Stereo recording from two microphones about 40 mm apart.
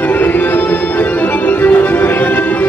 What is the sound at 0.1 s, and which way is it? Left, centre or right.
Music, left.